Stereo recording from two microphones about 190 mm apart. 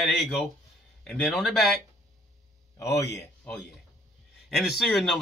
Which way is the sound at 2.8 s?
15° left (ahead or behind).